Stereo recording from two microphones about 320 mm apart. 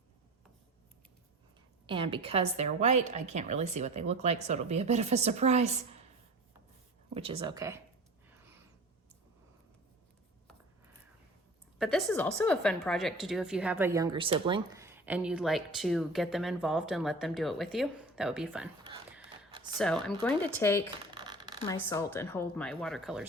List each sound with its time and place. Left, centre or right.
1.9 s a woman's voice: centre
7.1 s speech: centre
11.8 s a woman's voice: centre
19.8 s a woman's voice: centre
21.2 s a sound: centre
21.6 s a woman's voice: centre